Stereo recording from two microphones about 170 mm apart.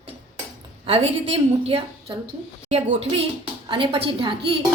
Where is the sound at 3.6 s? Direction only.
30° right (ahead or behind).